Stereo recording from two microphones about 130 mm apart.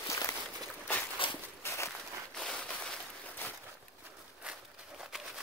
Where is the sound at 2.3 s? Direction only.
5° left (ahead or behind).